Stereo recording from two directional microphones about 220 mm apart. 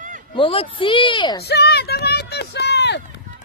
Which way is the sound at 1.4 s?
50° left (ahead or behind).